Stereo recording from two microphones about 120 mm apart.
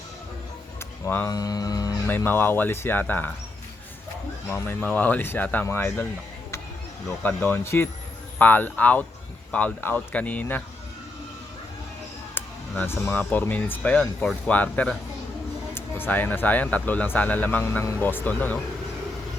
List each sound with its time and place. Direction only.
1.0 s speech: 15° left (ahead or behind)
1.3 s speech: 30° left (ahead or behind)
2.0 s speech: 15° left (ahead or behind)
4.4 s speech: 20° left (ahead or behind)
7.2 s speech: 15° left (ahead or behind)
12.3 s speech: 20° left (ahead or behind)